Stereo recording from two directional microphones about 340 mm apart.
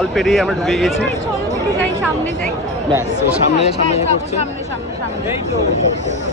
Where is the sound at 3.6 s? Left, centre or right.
Centre.